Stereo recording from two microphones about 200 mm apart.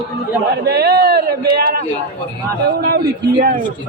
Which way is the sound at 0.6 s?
50° right (ahead or behind).